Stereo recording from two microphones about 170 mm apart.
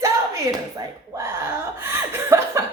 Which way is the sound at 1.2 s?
15° right (ahead or behind).